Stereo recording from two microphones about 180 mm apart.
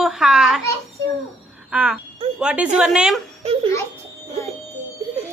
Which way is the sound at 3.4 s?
35° right (ahead or behind).